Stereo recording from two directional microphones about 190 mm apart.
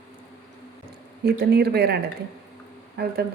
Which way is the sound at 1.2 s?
60° right (ahead or behind).